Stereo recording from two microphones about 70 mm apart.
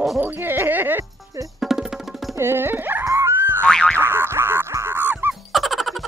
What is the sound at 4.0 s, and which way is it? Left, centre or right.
Boing, right.